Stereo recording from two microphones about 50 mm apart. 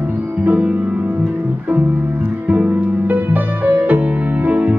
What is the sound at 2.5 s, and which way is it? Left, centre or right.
Music, right.